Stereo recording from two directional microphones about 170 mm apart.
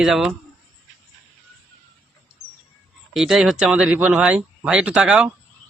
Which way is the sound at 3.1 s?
Centre (ahead or behind).